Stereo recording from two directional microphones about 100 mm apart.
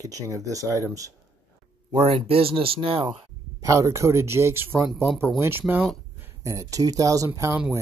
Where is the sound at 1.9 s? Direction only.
80° right.